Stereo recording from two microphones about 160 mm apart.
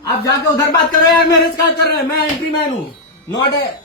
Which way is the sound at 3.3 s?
30° left (ahead or behind).